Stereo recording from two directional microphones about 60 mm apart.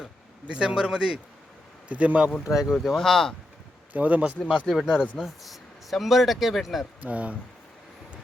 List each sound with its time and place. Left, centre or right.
0.4 s speech: centre
1.9 s speech: right
2.5 s speech: centre
2.7 s speech: centre
3.9 s speech: right
4.8 s speech: centre
7.0 s speech: right